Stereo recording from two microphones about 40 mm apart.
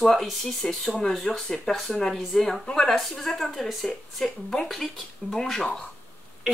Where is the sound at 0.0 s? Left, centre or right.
Centre.